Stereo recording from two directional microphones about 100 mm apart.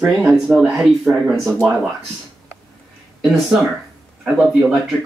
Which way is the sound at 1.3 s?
Centre (ahead or behind).